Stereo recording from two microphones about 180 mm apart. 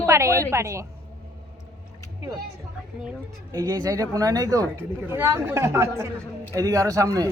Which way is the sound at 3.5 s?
20° right (ahead or behind).